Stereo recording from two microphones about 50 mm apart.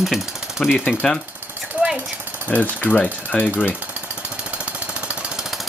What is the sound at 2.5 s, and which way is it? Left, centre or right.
Speech, left.